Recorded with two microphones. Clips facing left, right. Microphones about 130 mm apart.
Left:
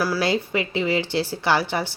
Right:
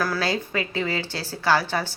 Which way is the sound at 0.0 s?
15° left (ahead or behind).